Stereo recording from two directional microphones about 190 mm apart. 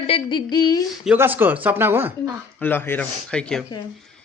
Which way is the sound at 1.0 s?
10° right (ahead or behind).